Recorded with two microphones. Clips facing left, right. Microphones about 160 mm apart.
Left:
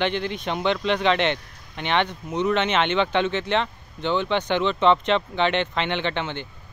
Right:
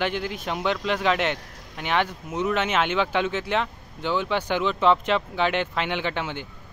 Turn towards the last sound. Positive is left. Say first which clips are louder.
# left 1 dB
turn(degrees=-5)  # may be behind; listen again after turning